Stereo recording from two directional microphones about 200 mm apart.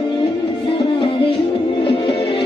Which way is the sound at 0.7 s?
25° left (ahead or behind).